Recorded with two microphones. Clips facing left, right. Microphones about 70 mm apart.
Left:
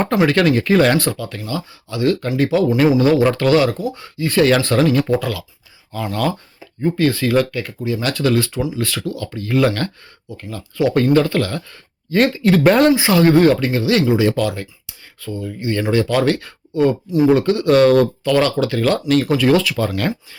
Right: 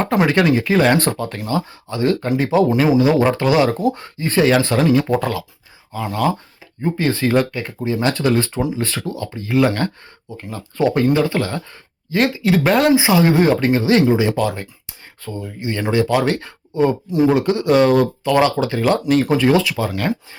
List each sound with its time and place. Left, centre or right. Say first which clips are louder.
0.3 s speech: left 1 dB; centre
0.9 s speech: right 1 dB; right
3.2 s speech: left 1 dB; centre
3.8 s speech: right 5 dB; right
4.4 s speech: left 1 dB; centre
6.8 s speech: left 2 dB; right
10.9 s speech: left 4 dB; centre
12.1 s speech: left 2 dB; centre
12.9 s speech: left 1 dB; centre
13.7 s speech: right 2 dB; right
14.8 s a sound: left 2 dB; right
15.4 s speech: left 3 dB; centre